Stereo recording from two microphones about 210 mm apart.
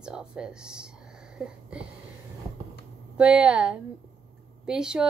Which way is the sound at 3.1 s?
5° right (ahead or behind).